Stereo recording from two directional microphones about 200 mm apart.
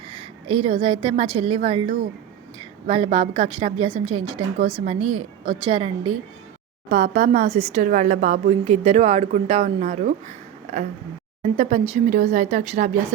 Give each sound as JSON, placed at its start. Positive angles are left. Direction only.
{"t": 0.1, "sound": "a woman's voice", "side_deg": -25}
{"t": 2.8, "sound": "a woman's voice", "side_deg": -30}
{"t": 6.9, "sound": "speech", "side_deg": -40}
{"t": 10.2, "sound": "a sound", "side_deg": -35}
{"t": 11.5, "sound": "speech", "side_deg": -35}